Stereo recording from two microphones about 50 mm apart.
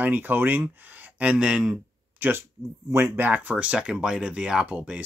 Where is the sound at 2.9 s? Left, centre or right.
Right.